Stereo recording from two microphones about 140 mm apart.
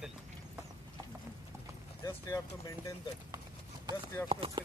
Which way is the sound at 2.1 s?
20° left (ahead or behind).